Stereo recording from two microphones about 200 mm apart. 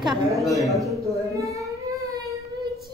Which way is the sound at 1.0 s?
15° right (ahead or behind).